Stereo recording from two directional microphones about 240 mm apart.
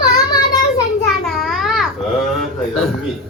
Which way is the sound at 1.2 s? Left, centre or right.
Centre.